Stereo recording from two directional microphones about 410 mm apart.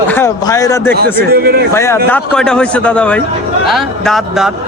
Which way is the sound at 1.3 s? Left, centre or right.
Right.